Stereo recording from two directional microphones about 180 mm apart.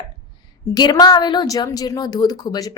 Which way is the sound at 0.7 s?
20° left (ahead or behind).